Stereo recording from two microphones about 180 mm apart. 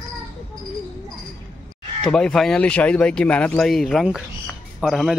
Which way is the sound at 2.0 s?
5° left (ahead or behind).